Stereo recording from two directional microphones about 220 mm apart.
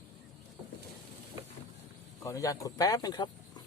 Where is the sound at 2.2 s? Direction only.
15° left (ahead or behind).